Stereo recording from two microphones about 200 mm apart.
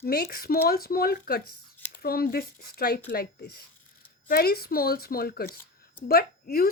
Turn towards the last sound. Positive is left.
turn(degrees=45)  # may be behind; listen again after turning